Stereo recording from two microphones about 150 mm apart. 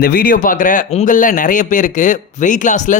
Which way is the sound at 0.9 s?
50° left (ahead or behind).